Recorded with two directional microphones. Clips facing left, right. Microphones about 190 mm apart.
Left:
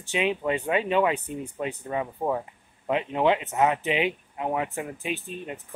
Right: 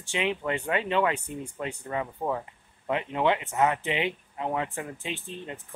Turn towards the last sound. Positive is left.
turn(degrees=15)  # may be behind; listen again after turning